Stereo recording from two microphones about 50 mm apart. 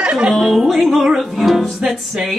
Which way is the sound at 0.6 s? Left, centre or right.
Centre.